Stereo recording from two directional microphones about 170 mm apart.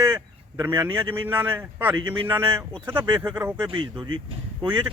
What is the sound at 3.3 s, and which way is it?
Speech, 10° right (ahead or behind).